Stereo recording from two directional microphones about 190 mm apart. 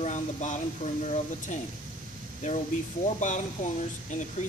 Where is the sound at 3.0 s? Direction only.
40° left (ahead or behind).